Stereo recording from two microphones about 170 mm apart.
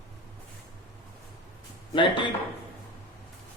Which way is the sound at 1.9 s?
30° left (ahead or behind).